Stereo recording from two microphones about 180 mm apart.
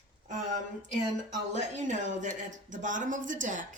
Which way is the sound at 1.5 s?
40° right (ahead or behind).